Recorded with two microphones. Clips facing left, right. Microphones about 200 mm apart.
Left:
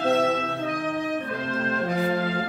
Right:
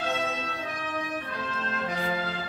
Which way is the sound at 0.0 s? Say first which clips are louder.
Left 9 dB; 50° left (ahead or behind).